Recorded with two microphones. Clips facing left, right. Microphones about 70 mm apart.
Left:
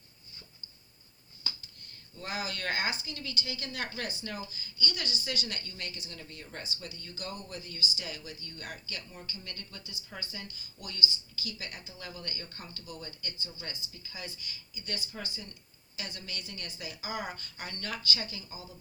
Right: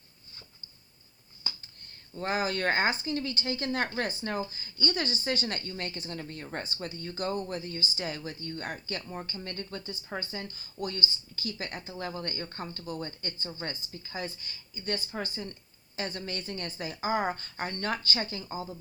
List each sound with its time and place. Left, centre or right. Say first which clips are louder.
2.1 s speech: right 7 dB; right